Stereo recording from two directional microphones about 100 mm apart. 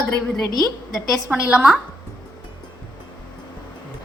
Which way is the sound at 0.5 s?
35° left (ahead or behind).